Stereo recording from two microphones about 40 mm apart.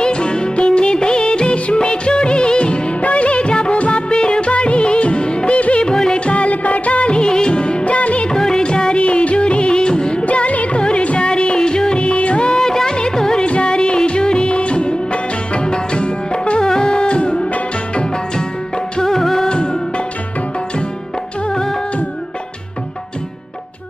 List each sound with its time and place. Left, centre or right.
0.0 s music of bollywood: left
5.6 s music: left
6.1 s music of bollywood: left
8.3 s music: centre
10.2 s music: left; by 13.5 s centre
13.5 s music of bollywood: left
15.5 s music: left
18.9 s music: centre
19.5 s music of bollywood: left
21.5 s music: centre